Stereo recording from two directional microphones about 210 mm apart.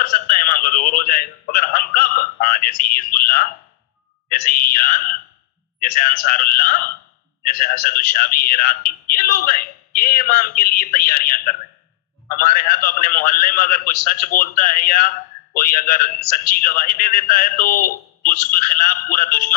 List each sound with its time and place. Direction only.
0.0 s a man's voice: 40° left (ahead or behind)
12.4 s a man's voice: 45° left (ahead or behind)